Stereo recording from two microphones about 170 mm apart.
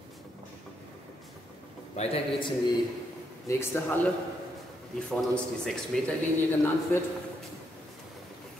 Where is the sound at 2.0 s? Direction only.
35° left (ahead or behind).